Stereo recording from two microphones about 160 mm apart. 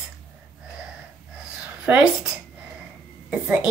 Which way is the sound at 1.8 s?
5° right (ahead or behind).